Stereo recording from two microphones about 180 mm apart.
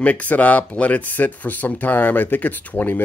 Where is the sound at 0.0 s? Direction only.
10° left (ahead or behind).